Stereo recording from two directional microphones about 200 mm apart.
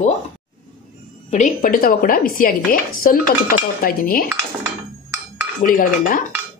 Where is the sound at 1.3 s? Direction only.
40° left (ahead or behind).